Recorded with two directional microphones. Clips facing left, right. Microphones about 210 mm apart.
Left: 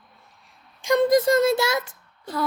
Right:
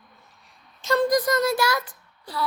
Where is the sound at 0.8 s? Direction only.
15° left (ahead or behind).